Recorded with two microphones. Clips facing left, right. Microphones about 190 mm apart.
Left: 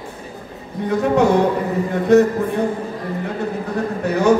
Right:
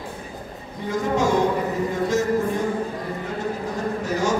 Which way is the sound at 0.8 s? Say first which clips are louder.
Left 6 dB; 65° left (ahead or behind).